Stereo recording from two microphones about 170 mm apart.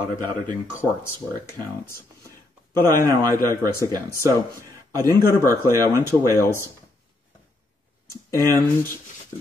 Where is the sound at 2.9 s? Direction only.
60° left (ahead or behind).